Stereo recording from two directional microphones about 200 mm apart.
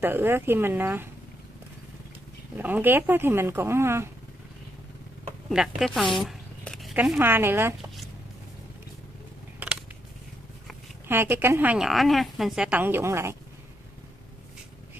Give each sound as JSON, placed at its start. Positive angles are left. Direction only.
{"t": 0.0, "sound": "a woman's voice", "side_deg": -10}
{"t": 2.5, "sound": "a woman's voice", "side_deg": -10}
{"t": 5.5, "sound": "zipper", "side_deg": 0}
{"t": 7.1, "sound": "a woman's voice", "side_deg": -10}
{"t": 9.6, "sound": "a sound", "side_deg": -5}
{"t": 11.1, "sound": "a woman's voice", "side_deg": -10}